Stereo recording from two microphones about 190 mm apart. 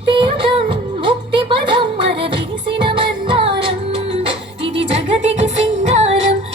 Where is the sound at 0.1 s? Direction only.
25° right (ahead or behind).